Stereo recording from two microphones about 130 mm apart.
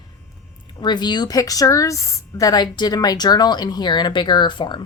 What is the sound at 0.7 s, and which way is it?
A woman's voice, 35° left (ahead or behind).